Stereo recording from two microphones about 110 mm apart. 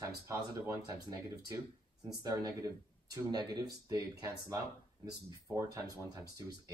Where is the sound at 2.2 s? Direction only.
30° right (ahead or behind).